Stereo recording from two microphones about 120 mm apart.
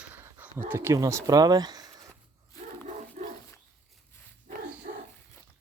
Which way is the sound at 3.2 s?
80° right.